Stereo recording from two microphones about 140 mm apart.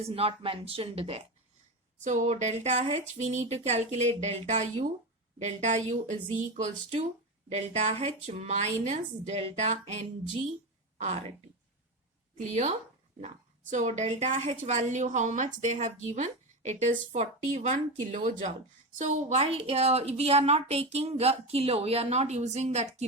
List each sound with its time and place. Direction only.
0.0 s a woman's voice: 45° right (ahead or behind)
2.0 s a woman's voice: 60° right (ahead or behind)
12.4 s a woman's voice: 50° right (ahead or behind)